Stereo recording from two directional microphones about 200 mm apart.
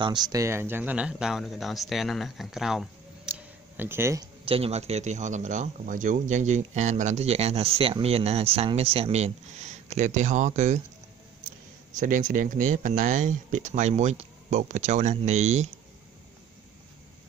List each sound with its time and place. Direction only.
0.0 s speech: 20° right (ahead or behind)
4.5 s speech: 30° right (ahead or behind)
11.9 s speech: 40° right (ahead or behind)